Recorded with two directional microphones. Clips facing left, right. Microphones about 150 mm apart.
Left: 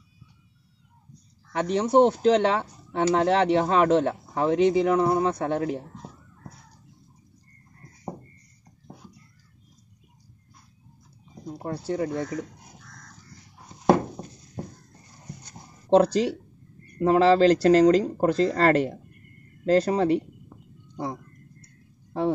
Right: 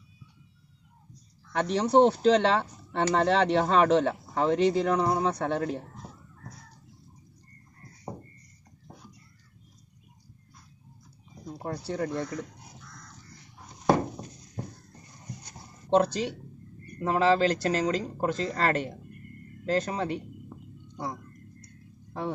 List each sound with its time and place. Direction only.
1.5 s speech: 10° left (ahead or behind)
11.4 s speech: 10° left (ahead or behind)
15.9 s speech: 35° left (ahead or behind)
21.0 s a sound: 25° left (ahead or behind)